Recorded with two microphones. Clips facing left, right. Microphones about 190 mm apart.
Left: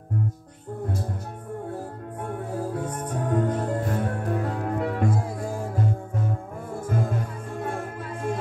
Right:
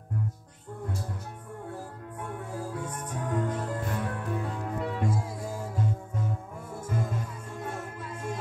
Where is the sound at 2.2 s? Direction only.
40° left (ahead or behind).